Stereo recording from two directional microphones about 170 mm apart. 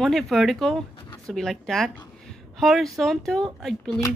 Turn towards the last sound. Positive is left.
turn(degrees=0)  # may be behind; listen again after turning